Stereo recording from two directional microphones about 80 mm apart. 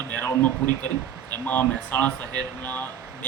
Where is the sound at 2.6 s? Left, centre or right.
Left.